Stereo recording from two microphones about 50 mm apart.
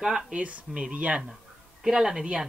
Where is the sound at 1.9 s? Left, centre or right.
Centre.